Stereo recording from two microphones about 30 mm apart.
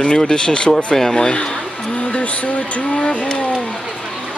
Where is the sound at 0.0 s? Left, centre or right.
Left.